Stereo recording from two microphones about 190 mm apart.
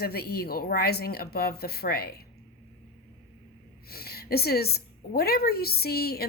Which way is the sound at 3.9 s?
55° left (ahead or behind).